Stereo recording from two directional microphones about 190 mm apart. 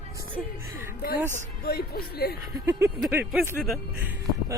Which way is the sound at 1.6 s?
55° left (ahead or behind).